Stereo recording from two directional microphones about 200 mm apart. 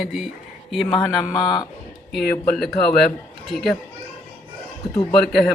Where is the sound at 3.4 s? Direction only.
Centre (ahead or behind).